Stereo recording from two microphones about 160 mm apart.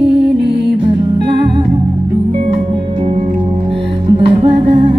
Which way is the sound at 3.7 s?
35° right (ahead or behind).